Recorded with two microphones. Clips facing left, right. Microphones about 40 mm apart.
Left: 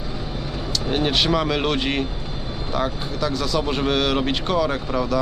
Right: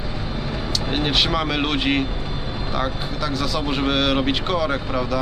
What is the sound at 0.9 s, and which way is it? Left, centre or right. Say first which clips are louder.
Speech: left 1 dB; centre.